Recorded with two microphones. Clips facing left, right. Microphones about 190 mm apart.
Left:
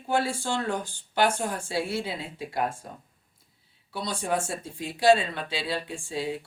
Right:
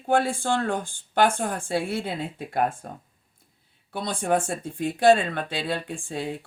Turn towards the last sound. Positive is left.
turn(degrees=-55)  # may be behind; listen again after turning